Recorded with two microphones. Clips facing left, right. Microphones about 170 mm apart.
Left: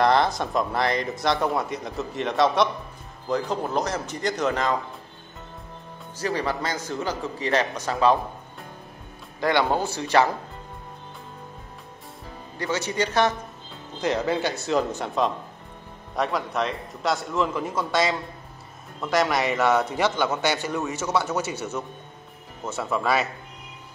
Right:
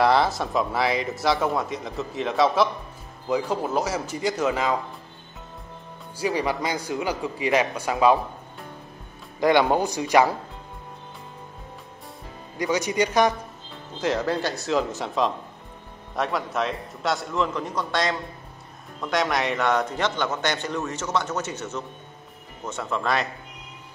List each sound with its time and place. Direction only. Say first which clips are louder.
0.0 s a man's voice: even; 5° right (ahead or behind)
6.1 s a man's voice: right 2 dB; 10° right (ahead or behind)
9.4 s a man's voice: right 3 dB; 15° right (ahead or behind)
12.5 s a man's voice: right 3 dB; 15° right (ahead or behind)
14.0 s a man's voice: even; centre (ahead or behind)